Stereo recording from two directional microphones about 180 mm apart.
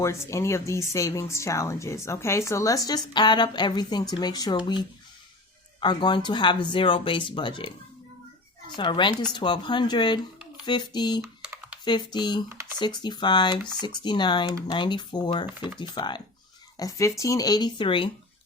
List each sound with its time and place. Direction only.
0.0 s speech: 15° left (ahead or behind)
5.8 s speech: 25° left (ahead or behind)
8.7 s speech: 25° left (ahead or behind)
11.2 s typing: 10° right (ahead or behind)
11.9 s speech: 25° left (ahead or behind)
12.5 s speech: 15° right (ahead or behind)
12.8 s speech: 25° left (ahead or behind)